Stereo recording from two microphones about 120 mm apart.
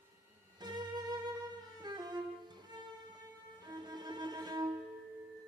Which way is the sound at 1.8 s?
35° right (ahead or behind).